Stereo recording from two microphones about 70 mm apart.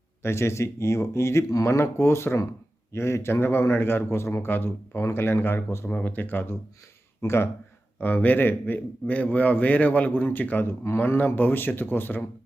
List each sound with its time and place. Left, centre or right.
0.2 s a man's voice: left
7.9 s a man's voice: left